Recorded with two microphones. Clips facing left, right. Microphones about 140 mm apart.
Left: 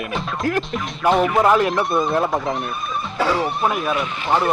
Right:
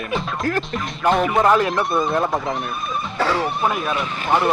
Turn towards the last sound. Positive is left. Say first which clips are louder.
# even
turn(degrees=0)  # may be behind; listen again after turning